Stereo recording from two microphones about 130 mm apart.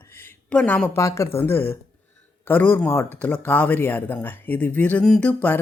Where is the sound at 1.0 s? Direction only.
25° left (ahead or behind).